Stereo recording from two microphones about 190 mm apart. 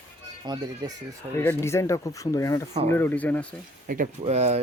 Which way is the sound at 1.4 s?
10° left (ahead or behind).